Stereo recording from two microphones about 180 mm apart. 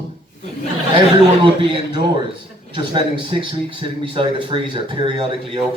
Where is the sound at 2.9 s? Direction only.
30° right (ahead or behind).